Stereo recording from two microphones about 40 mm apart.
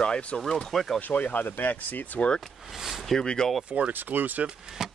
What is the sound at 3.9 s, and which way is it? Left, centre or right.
Speech, right.